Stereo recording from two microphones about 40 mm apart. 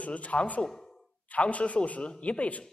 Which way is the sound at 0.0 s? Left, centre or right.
Left.